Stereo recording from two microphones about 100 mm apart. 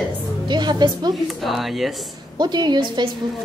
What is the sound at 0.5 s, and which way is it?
Speech, 45° right (ahead or behind).